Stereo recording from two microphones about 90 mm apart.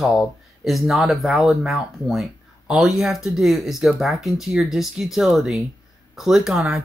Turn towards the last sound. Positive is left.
turn(degrees=-5)  # may be behind; listen again after turning